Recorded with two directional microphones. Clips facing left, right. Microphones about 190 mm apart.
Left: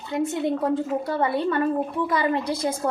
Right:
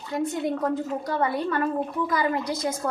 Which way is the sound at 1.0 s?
25° left (ahead or behind).